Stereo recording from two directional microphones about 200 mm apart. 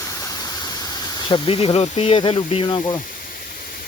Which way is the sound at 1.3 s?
30° left (ahead or behind).